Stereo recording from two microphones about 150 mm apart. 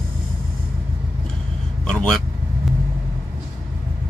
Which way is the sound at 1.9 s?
5° left (ahead or behind).